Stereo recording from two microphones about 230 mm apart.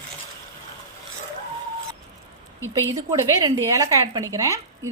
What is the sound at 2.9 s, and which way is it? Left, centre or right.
Speech, centre.